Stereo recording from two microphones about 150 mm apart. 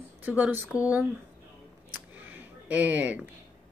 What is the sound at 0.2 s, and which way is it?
Speech, 10° right (ahead or behind).